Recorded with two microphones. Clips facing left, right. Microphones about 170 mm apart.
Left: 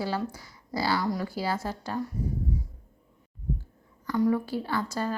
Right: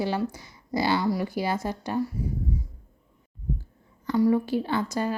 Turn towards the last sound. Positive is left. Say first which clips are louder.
# right 3 dB
turn(degrees=-15)  # may be behind; listen again after turning